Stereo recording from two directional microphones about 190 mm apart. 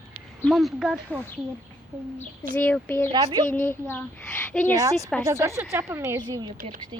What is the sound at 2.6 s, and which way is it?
A woman's voice, 10° left (ahead or behind).